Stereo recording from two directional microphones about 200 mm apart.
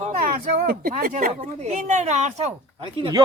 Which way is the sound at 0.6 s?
45° right (ahead or behind).